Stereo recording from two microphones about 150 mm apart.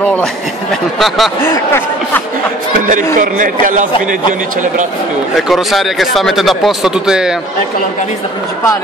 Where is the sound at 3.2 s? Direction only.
65° right (ahead or behind).